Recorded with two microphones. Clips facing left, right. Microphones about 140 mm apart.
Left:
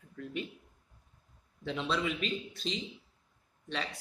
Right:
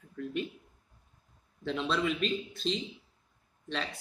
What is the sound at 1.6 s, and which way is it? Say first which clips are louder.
Speech: right 2 dB; 5° left (ahead or behind).